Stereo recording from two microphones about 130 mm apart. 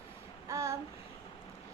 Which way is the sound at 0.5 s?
25° right (ahead or behind).